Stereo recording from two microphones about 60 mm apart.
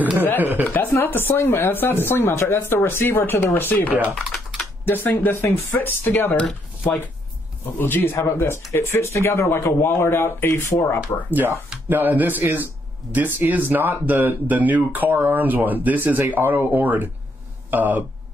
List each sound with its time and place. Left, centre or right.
0.4 s a man's voice: right
0.7 s a sound: left
0.9 s speech: left
6.4 s speech: centre
7.6 s speech: left
11.2 s a man's voice: right